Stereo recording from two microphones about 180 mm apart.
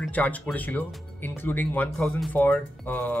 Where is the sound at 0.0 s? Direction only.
10° left (ahead or behind).